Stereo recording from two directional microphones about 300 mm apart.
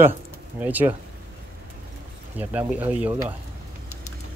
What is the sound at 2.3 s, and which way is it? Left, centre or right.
Speech, centre.